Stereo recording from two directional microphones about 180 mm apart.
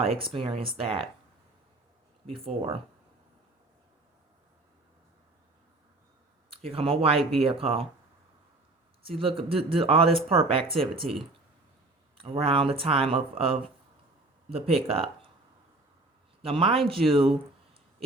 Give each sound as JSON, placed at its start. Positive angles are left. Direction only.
{"t": 0.0, "sound": "speech", "side_deg": -30}
{"t": 6.5, "sound": "speech", "side_deg": -30}
{"t": 9.0, "sound": "speech", "side_deg": -30}
{"t": 16.4, "sound": "speech", "side_deg": -30}